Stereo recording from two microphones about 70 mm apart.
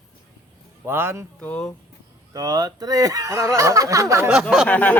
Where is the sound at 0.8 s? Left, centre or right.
Right.